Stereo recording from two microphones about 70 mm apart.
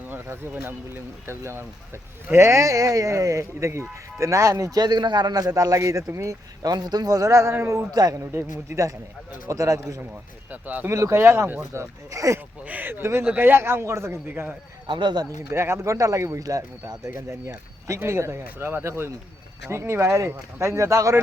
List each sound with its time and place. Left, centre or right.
0.1 s speech: right
1.3 s a man's voice: right
4.8 s a man's voice: right
6.6 s a man's voice: right
7.9 s a man's voice: right
8.2 s a man's voice: right
9.5 s speech: right
10.5 s speech: right
10.8 s a man's voice: right
12.6 s a man's voice: right
15.0 s speech: right
15.4 s speech: right
18.0 s a man's voice: right